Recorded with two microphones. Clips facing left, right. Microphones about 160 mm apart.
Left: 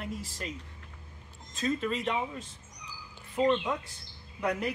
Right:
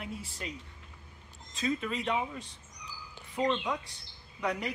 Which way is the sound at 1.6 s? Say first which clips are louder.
Left 2 dB; centre (ahead or behind).